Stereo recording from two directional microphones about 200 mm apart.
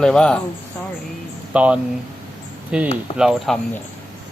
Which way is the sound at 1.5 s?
5° right (ahead or behind).